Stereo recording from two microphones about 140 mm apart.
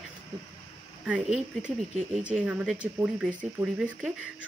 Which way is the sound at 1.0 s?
5° right (ahead or behind).